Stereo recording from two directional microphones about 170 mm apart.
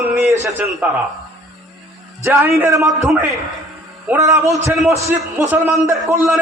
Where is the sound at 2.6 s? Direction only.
20° right (ahead or behind).